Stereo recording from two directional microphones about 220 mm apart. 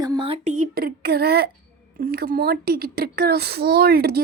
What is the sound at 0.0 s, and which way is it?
A child's voice, 20° right (ahead or behind).